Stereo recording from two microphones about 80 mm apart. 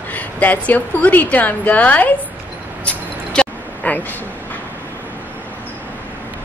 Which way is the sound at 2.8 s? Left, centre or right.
Centre.